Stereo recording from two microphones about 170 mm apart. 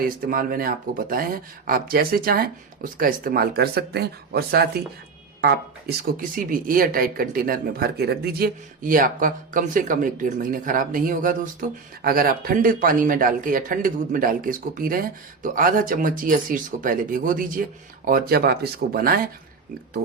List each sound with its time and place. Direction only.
0.0 s speech: 55° right (ahead or behind)